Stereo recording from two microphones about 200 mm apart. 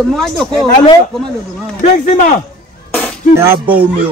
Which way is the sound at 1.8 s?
40° left (ahead or behind).